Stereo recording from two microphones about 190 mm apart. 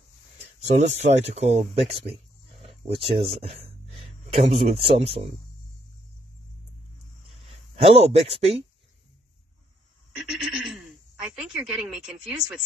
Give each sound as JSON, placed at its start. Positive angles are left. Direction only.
{"t": 0.6, "sound": "speech", "side_deg": -35}
{"t": 2.6, "sound": "a sound", "side_deg": -30}
{"t": 4.3, "sound": "speech", "side_deg": -30}
{"t": 7.7, "sound": "speech", "side_deg": -35}
{"t": 10.3, "sound": "speech", "side_deg": 0}